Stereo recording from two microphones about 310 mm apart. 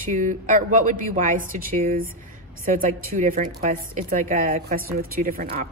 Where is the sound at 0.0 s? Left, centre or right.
Right.